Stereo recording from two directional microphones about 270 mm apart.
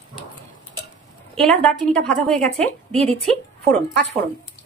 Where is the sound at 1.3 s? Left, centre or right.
Centre.